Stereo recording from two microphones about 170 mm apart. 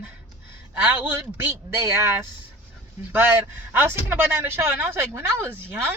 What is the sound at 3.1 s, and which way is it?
Speech, 10° right (ahead or behind).